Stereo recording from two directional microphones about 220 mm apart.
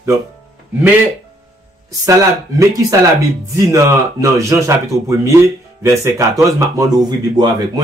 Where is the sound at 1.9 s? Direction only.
15° right (ahead or behind).